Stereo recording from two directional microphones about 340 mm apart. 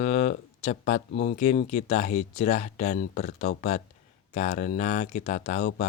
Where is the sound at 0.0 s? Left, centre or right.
Left.